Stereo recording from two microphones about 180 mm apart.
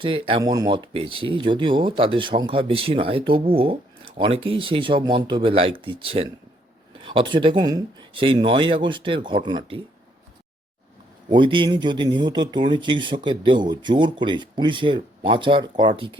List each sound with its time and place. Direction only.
0.0 s speech: 30° right (ahead or behind)
11.3 s speech: 25° right (ahead or behind)